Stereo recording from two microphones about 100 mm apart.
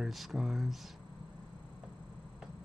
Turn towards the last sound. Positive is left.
turn(degrees=-5)  # may be behind; listen again after turning